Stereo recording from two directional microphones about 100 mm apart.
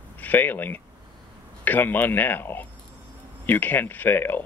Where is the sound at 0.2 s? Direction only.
20° left (ahead or behind).